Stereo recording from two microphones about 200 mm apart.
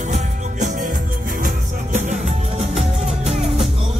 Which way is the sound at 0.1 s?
40° right (ahead or behind).